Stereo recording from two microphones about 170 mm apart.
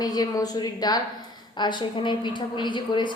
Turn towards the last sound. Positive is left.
turn(degrees=30)  # may be behind; listen again after turning